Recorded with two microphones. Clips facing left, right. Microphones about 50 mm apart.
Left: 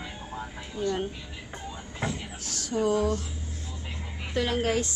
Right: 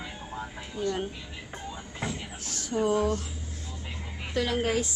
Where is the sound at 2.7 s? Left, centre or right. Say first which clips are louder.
Even; right.